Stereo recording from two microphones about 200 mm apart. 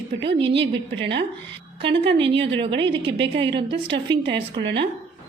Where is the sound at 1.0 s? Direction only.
60° right (ahead or behind).